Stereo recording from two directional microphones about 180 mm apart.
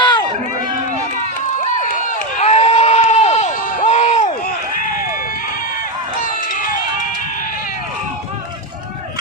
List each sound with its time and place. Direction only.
0.0 s run: 25° left (ahead or behind)
1.6 s crowd: 40° right (ahead or behind)
2.0 s a sound: 40° left (ahead or behind)